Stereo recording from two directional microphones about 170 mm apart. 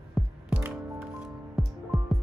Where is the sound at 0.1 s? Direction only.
5° right (ahead or behind).